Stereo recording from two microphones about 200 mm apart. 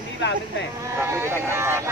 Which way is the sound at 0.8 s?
15° right (ahead or behind).